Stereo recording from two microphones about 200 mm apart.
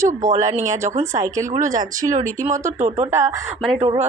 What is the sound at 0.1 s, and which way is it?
Speech, 40° right (ahead or behind).